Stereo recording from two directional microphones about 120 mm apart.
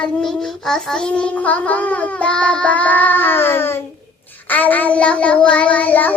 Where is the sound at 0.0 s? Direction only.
5° left (ahead or behind).